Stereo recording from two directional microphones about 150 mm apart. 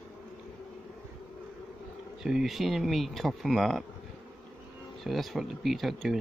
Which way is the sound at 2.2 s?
Centre (ahead or behind).